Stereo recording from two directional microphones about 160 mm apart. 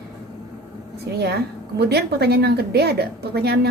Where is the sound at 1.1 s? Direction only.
90° right.